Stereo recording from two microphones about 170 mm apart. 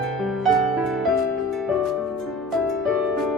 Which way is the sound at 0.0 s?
Centre (ahead or behind).